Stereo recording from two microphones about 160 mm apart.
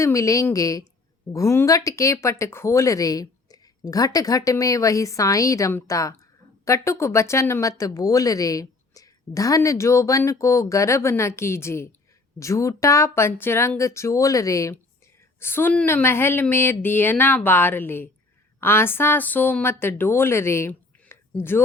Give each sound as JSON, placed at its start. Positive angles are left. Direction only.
{"t": 0.0, "sound": "a woman's voice", "side_deg": 20}